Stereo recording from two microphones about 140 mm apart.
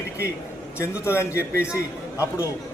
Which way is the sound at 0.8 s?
20° left (ahead or behind).